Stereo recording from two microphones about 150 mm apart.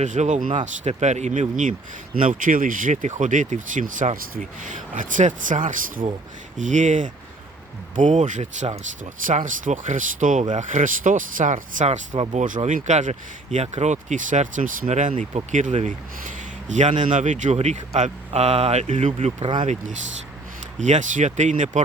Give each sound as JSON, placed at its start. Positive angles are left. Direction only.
{"t": 0.0, "sound": "speech", "side_deg": -55}
{"t": 20.7, "sound": "speech", "side_deg": -55}